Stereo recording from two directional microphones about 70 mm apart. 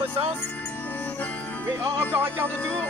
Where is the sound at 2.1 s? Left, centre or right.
Right.